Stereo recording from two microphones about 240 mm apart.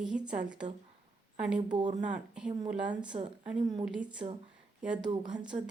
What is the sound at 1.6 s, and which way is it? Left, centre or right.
Speech, centre.